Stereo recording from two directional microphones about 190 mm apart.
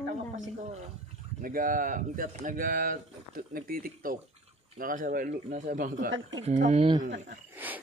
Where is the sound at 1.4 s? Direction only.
45° right (ahead or behind).